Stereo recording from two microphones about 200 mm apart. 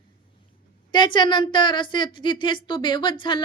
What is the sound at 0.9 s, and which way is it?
A woman's voice, 20° left (ahead or behind).